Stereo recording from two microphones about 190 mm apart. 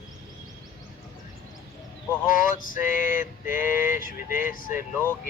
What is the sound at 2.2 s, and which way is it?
Speech, 45° left (ahead or behind).